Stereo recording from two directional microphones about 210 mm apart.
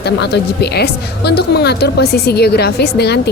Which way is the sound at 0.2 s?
50° left (ahead or behind).